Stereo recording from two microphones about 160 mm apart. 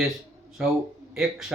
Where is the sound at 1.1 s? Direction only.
Centre (ahead or behind).